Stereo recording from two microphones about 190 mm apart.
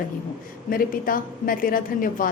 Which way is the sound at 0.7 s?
45° left (ahead or behind).